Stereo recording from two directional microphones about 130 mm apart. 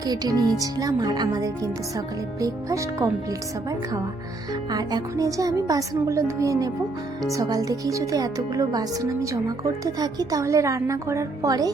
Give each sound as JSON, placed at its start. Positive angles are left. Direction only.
{"t": 0.0, "sound": "speech", "side_deg": -30}
{"t": 4.7, "sound": "speech", "side_deg": -30}